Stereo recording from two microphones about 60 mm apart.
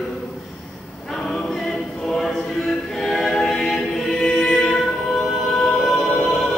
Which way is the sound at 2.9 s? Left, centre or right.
Centre.